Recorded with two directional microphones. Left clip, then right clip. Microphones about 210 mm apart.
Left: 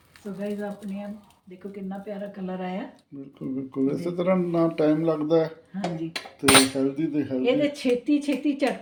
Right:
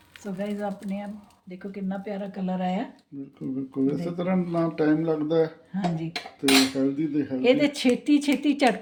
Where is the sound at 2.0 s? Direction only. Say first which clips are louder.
Even; 60° right (ahead or behind).